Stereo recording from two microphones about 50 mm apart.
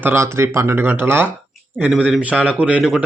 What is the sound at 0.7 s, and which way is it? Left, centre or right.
Speech, right.